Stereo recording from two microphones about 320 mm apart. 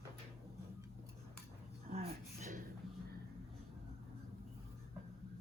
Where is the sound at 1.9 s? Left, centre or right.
Centre.